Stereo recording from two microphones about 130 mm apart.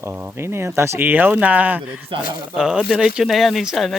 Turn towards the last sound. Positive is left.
turn(degrees=0)  # may be behind; listen again after turning